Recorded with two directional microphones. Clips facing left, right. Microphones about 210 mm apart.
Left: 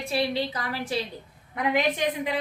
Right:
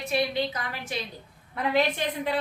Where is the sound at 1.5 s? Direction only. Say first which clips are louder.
Even; 15° left (ahead or behind).